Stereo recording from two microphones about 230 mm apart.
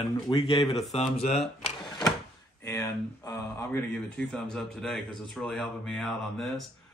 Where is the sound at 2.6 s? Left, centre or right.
Centre.